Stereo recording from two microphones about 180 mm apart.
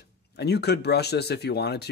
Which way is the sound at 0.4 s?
65° left (ahead or behind).